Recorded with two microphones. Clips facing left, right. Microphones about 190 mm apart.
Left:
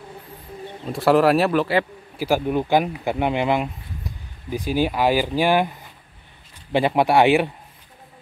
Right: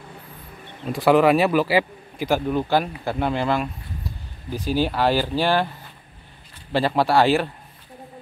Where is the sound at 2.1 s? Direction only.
10° left (ahead or behind).